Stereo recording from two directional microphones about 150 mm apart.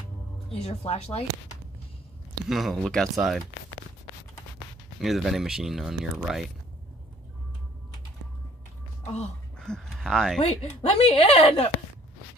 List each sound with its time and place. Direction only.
0.5 s a woman's voice: 45° left (ahead or behind)
2.4 s speech: centre (ahead or behind)
5.0 s speech: centre (ahead or behind)
9.6 s speech: 5° left (ahead or behind)
10.4 s a woman's voice: 45° left (ahead or behind)